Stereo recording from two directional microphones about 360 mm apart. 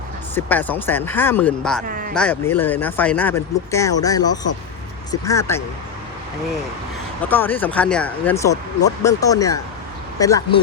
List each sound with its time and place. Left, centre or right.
0.3 s speech: centre
1.9 s speech: right
2.1 s speech: centre
7.3 s speech: centre